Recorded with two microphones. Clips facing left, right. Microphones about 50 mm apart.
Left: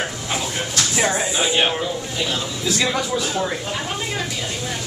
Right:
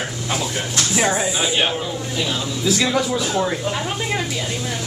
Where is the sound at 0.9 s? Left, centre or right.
Centre.